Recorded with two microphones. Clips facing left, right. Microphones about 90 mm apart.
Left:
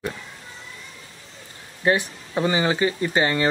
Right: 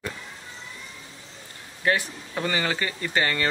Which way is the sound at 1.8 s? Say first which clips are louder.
Left 3 dB; 20° left (ahead or behind).